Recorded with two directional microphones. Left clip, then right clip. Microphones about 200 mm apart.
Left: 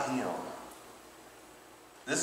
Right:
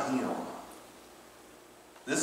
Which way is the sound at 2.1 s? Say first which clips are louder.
Right 1 dB; centre (ahead or behind).